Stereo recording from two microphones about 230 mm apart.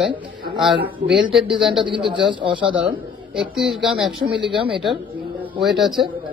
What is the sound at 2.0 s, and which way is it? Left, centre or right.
Speech, right.